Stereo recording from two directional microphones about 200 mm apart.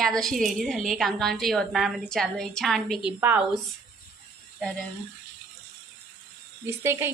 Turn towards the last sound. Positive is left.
turn(degrees=-10)  # may be behind; listen again after turning